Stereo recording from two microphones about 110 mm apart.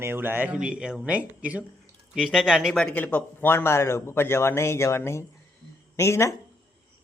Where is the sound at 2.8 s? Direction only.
10° left (ahead or behind).